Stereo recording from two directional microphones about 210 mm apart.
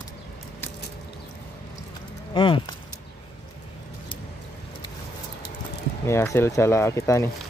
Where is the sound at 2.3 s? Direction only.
25° left (ahead or behind).